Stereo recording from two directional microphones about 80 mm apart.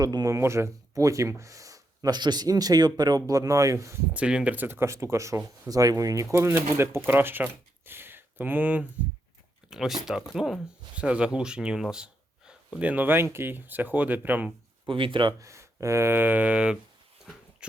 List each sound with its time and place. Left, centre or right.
0.0 s speech: right
0.3 s speech: right
4.1 s speech: centre
4.5 s speech: right
6.4 s speech: right
9.6 s speech: centre; by 14.5 s right
14.8 s speech: right
15.4 s speech: right; by 16.7 s centre
17.6 s a sound: centre